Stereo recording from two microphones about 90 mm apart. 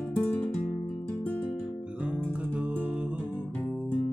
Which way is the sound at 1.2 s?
15° left (ahead or behind).